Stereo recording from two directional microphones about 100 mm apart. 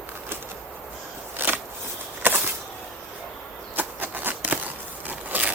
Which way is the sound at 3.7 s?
20° right (ahead or behind).